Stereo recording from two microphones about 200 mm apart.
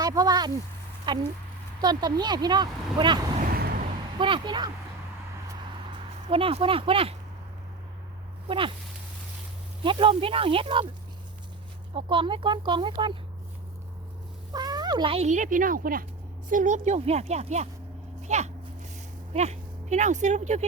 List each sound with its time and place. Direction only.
0.0 s a sound: 20° right (ahead or behind)
1.0 s speech: 25° right (ahead or behind)
3.3 s a sound: 45° right (ahead or behind)
4.2 s speech: 25° right (ahead or behind)
6.2 s speech: 30° right (ahead or behind)
8.4 s speech: 25° right (ahead or behind)
9.8 s speech: 25° right (ahead or behind)
11.9 s speech: 25° right (ahead or behind)
14.5 s speech: 20° right (ahead or behind)